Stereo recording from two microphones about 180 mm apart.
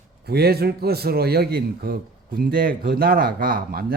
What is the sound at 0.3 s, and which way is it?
A man's voice, 60° right (ahead or behind).